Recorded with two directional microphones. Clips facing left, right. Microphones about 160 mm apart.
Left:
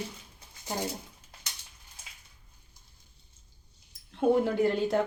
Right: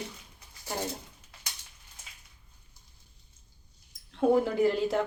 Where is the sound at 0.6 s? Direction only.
15° left (ahead or behind).